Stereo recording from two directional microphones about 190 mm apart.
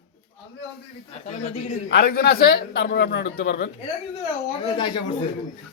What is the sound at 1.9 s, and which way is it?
A man's voice, 55° left (ahead or behind).